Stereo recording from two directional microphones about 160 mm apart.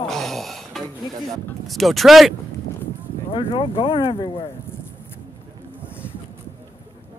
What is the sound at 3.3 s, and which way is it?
Speech, 35° left (ahead or behind).